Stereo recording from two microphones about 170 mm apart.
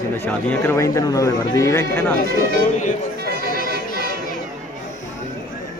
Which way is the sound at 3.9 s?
60° left (ahead or behind).